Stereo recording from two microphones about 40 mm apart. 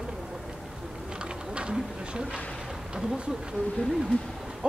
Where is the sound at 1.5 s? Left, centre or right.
Right.